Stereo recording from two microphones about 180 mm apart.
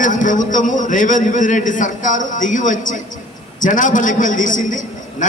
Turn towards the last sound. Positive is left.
turn(degrees=45)  # may be behind; listen again after turning